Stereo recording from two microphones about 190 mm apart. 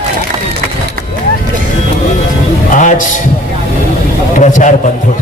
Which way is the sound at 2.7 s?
40° left (ahead or behind).